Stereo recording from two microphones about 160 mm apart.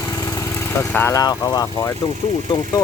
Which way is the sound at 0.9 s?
15° left (ahead or behind).